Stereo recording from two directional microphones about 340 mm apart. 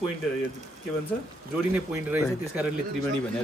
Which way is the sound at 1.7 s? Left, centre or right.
Centre.